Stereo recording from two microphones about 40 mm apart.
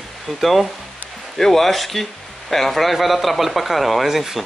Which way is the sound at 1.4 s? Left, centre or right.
Centre.